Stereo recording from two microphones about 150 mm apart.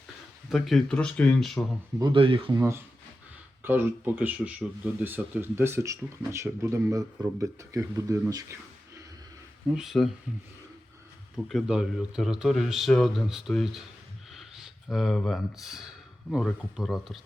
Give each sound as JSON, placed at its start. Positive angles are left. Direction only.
{"t": 0.5, "sound": "speech", "side_deg": 0}
{"t": 2.0, "sound": "speech", "side_deg": -35}
{"t": 2.6, "sound": "speech", "side_deg": -20}
{"t": 9.7, "sound": "speech", "side_deg": 0}
{"t": 11.4, "sound": "speech", "side_deg": 0}
{"t": 14.3, "sound": "a sound", "side_deg": 0}
{"t": 16.7, "sound": "speech", "side_deg": 0}